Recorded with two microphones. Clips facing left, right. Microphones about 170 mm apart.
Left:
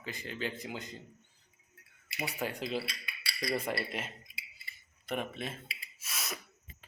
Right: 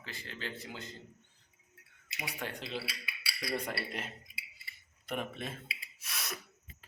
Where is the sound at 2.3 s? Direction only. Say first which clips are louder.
Left 4 dB; 10° left (ahead or behind).